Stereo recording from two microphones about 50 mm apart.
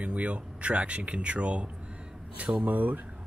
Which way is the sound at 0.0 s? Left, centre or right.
Right.